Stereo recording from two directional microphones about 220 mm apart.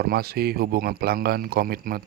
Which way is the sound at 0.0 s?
45° right (ahead or behind).